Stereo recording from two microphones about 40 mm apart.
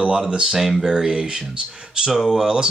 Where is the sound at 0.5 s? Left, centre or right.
Centre.